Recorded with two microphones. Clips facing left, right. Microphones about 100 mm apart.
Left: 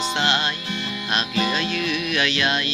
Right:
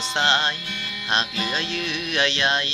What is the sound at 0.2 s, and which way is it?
Music, 30° right (ahead or behind).